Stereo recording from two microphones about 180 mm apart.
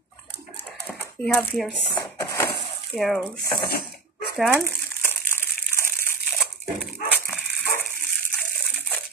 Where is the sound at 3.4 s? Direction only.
60° left (ahead or behind).